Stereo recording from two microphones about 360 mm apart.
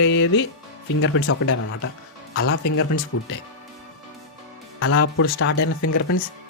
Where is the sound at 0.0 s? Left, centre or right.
Left.